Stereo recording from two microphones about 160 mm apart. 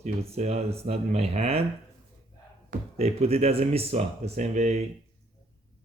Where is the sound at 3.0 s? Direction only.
40° right (ahead or behind).